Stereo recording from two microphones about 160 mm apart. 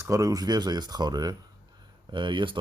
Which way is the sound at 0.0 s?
20° right (ahead or behind).